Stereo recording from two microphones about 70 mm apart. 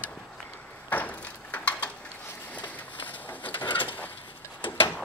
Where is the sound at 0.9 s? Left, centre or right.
Left.